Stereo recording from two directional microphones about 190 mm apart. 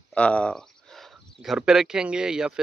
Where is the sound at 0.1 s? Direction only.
5° left (ahead or behind).